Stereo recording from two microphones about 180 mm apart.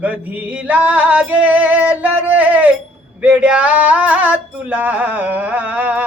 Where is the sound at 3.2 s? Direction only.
5° right (ahead or behind).